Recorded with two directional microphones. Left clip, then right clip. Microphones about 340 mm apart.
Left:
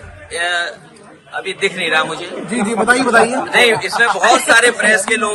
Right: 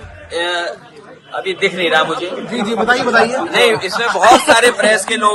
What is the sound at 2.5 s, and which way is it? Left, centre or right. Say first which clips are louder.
Speech: left 1 dB; centre.